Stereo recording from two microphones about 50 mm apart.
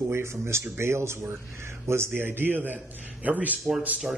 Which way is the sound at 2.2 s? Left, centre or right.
Right.